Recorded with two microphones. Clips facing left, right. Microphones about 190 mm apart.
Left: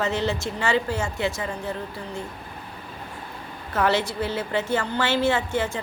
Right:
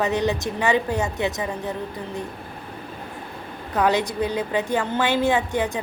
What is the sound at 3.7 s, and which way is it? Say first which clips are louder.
A woman's voice: right 2 dB; 15° right (ahead or behind).